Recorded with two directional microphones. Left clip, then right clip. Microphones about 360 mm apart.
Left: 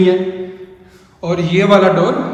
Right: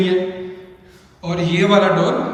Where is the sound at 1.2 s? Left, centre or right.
Centre.